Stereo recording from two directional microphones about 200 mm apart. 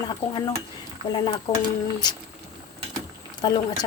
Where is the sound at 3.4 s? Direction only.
20° left (ahead or behind).